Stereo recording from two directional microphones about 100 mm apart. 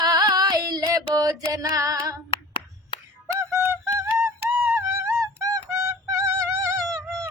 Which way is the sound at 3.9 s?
25° right (ahead or behind).